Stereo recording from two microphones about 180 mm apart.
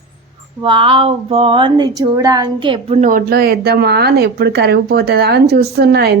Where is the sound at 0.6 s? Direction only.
30° right (ahead or behind).